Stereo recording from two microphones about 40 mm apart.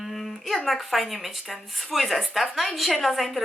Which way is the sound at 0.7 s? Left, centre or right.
Centre.